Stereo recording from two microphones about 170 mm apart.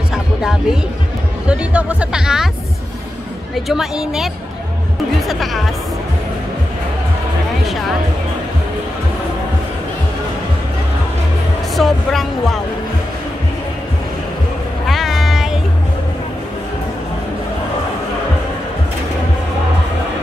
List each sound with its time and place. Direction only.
0.1 s music: centre (ahead or behind)
1.5 s speech: 5° right (ahead or behind)
3.5 s speech: centre (ahead or behind)
5.3 s speech: centre (ahead or behind)
11.7 s speech: centre (ahead or behind)
14.9 s meow: centre (ahead or behind)